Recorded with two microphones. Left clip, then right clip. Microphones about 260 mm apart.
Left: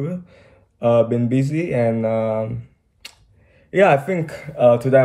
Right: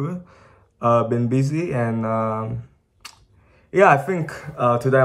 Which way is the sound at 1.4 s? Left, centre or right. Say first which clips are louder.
Left 4 dB; centre.